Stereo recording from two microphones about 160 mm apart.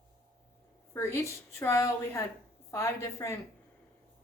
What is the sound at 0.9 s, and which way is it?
A woman's voice, 20° left (ahead or behind).